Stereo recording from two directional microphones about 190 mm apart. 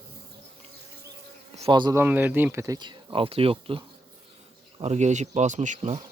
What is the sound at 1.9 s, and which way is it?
Speech, 10° right (ahead or behind).